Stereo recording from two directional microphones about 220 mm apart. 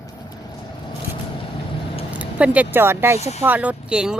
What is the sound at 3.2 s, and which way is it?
Speech, 30° left (ahead or behind).